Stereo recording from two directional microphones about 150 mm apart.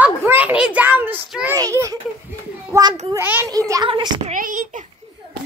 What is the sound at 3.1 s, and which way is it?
Speech, 15° right (ahead or behind).